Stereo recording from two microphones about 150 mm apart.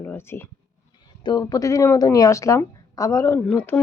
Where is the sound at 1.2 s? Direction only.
25° left (ahead or behind); by 3.8 s 10° left (ahead or behind).